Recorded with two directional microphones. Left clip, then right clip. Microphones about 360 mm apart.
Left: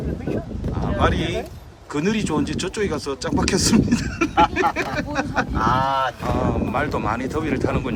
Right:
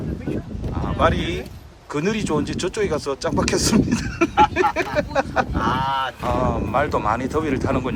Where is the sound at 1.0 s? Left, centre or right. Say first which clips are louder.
Right 2 dB; centre.